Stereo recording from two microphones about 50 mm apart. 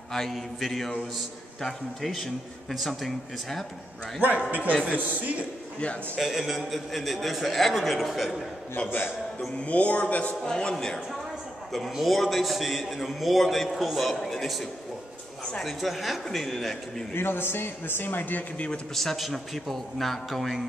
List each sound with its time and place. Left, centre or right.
0.1 s a man's voice: centre
4.5 s speech: right
5.8 s a man's voice: left
6.1 s a man's voice: centre
9.7 s a man's voice: left
10.5 s speech: centre
11.9 s a man's voice: centre
17.1 s speech: left
18.9 s a man's voice: centre